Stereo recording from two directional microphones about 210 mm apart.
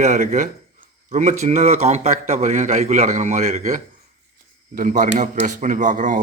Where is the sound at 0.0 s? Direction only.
35° right (ahead or behind).